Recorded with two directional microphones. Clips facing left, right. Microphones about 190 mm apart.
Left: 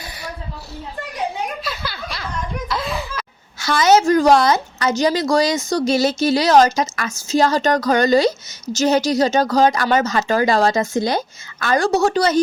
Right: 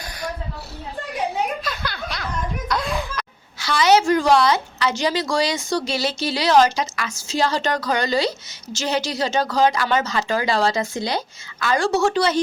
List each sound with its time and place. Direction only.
1.6 s a sound: 5° left (ahead or behind)
2.6 s music: centre (ahead or behind)
3.6 s a woman's voice: 45° left (ahead or behind)